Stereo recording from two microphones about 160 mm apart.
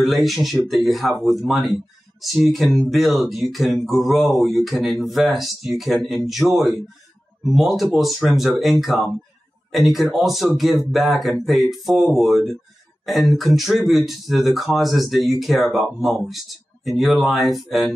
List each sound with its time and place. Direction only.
0.0 s speech: centre (ahead or behind)